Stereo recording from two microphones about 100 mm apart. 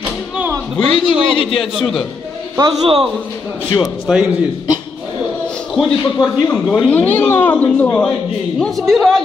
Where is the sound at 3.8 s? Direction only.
5° right (ahead or behind).